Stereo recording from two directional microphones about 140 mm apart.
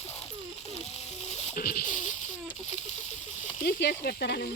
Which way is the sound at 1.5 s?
90° left.